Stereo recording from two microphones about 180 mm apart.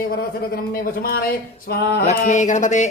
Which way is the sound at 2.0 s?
45° left (ahead or behind).